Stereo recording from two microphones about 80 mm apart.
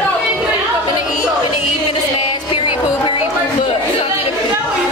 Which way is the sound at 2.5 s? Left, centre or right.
Left.